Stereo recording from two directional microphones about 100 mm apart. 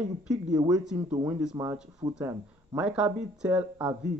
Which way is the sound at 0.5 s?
40° right (ahead or behind).